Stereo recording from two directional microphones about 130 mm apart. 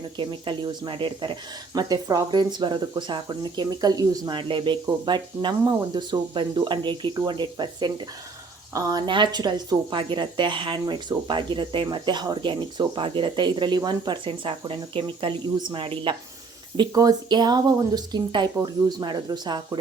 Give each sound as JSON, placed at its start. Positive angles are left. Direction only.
{"t": 0.2, "sound": "speech", "side_deg": -40}
{"t": 16.7, "sound": "speech", "side_deg": -30}